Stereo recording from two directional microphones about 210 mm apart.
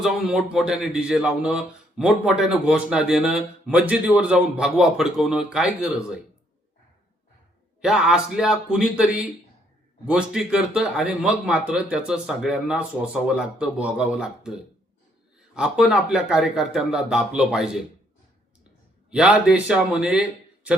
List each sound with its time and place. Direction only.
0.0 s a man's voice: centre (ahead or behind)
7.8 s a man's voice: 5° right (ahead or behind)
19.1 s a man's voice: 5° right (ahead or behind)